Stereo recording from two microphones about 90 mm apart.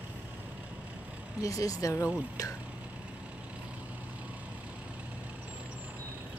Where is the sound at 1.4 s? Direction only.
40° left (ahead or behind).